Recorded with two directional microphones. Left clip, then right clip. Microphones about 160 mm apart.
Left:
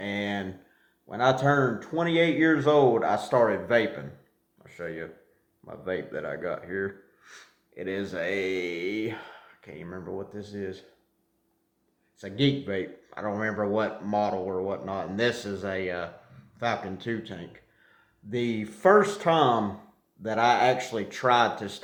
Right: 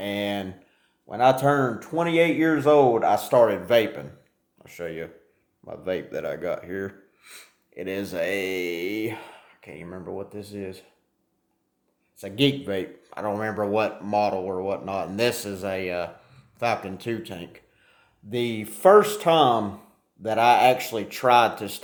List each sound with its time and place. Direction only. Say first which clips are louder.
0.0 s a sound: right 3 dB; 40° right (ahead or behind)
1.0 s speech: right 4 dB; 35° right (ahead or behind)
12.2 s speech: right 4 dB; 40° right (ahead or behind)